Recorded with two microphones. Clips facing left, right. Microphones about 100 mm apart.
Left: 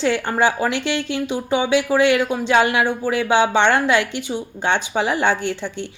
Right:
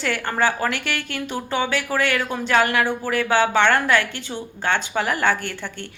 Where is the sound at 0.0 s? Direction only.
20° left (ahead or behind).